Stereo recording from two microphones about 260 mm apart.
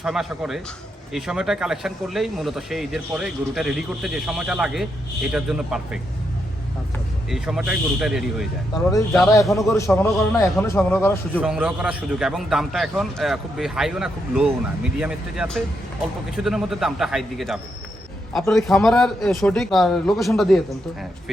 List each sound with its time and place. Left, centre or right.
0.0 s speech: centre
7.3 s speech: centre
9.3 s speech: centre
11.3 s speech: centre